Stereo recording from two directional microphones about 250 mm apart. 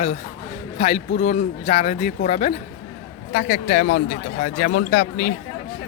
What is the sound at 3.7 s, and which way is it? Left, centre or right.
Speech, left.